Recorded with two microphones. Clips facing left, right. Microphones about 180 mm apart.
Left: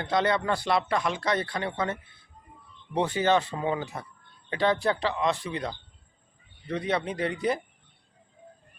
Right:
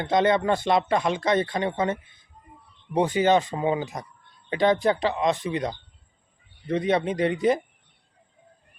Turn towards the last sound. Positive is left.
turn(degrees=-20)  # may be behind; listen again after turning